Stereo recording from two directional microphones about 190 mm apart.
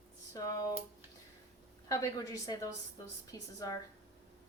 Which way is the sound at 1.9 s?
20° left (ahead or behind).